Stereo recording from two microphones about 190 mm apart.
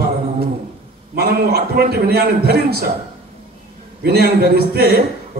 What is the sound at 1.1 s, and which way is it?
A man's voice, 55° right (ahead or behind).